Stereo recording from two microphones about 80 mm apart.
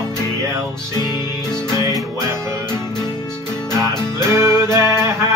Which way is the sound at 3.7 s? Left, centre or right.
Right.